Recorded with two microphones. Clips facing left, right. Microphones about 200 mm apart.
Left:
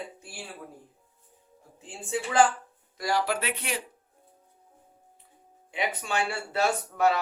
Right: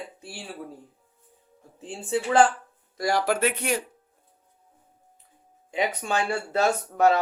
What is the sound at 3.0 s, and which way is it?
Speech, 50° right (ahead or behind).